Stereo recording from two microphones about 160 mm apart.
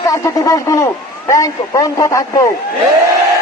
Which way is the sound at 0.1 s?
20° left (ahead or behind).